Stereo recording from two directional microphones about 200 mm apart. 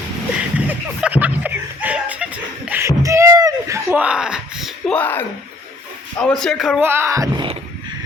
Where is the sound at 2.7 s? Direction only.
15° right (ahead or behind); by 5.2 s 10° left (ahead or behind).